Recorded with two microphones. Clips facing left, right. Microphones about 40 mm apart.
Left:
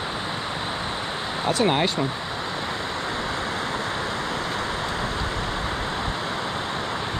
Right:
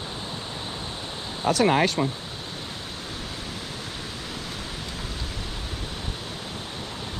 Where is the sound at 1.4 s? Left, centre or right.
Left.